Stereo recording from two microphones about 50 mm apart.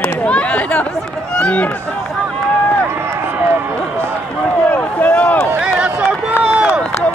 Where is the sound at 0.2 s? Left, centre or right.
Left.